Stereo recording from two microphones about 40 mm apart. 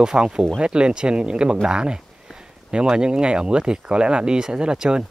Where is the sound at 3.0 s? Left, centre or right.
Right.